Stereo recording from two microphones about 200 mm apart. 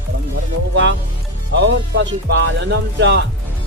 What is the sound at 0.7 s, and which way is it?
Speech, 65° right (ahead or behind).